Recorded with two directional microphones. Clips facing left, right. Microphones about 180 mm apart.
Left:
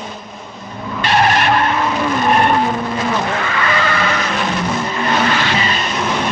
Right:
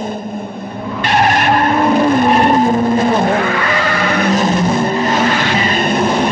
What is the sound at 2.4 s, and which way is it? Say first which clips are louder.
Vehicle: right 5 dB; 40° right (ahead or behind).